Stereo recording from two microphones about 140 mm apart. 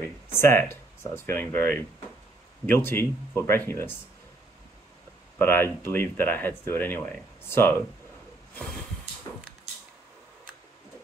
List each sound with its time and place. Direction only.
0.3 s speech: 15° left (ahead or behind)
2.6 s speech: 15° left (ahead or behind)
5.4 s speech: 15° left (ahead or behind)